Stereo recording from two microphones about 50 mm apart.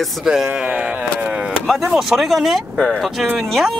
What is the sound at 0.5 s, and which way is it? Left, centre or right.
Speech, right.